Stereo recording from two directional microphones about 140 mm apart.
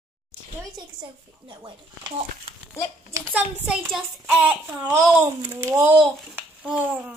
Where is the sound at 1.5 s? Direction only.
30° right (ahead or behind).